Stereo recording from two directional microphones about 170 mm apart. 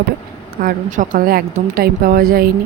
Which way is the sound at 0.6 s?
50° right (ahead or behind).